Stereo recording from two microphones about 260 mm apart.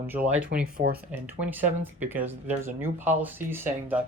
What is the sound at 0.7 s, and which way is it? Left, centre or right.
Speech, right.